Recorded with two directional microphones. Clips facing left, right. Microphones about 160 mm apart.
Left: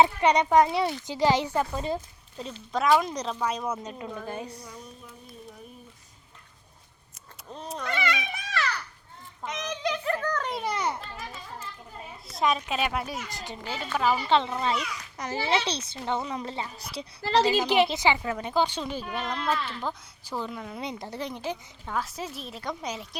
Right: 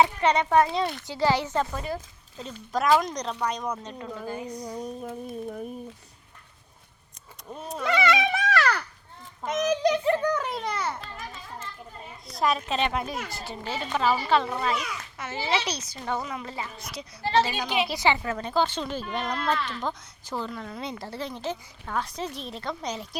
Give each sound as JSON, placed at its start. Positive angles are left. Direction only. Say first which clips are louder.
{"t": 0.0, "sound": "speech", "louder": "left 1 dB", "side_deg": 15}
{"t": 2.4, "sound": "speech", "louder": "even", "side_deg": 0}
{"t": 4.3, "sound": "a child's voice", "louder": "right 2 dB", "side_deg": 30}
{"t": 4.6, "sound": "a sound", "louder": "right 10 dB", "side_deg": -40}
{"t": 7.5, "sound": "speech", "louder": "right 2 dB", "side_deg": -5}
{"t": 7.9, "sound": "dog", "louder": "right 8 dB", "side_deg": -90}
{"t": 9.5, "sound": "a sound", "louder": "right 8 dB", "side_deg": -45}
{"t": 10.0, "sound": "giggle", "louder": "right 5 dB", "side_deg": -20}
{"t": 10.5, "sound": "speech", "louder": "left 1 dB", "side_deg": 10}
{"t": 12.3, "sound": "speech", "louder": "right 1 dB", "side_deg": 0}
{"t": 13.4, "sound": "a child's voice", "louder": "right 2 dB", "side_deg": 15}
{"t": 17.8, "sound": "speech", "louder": "even", "side_deg": 20}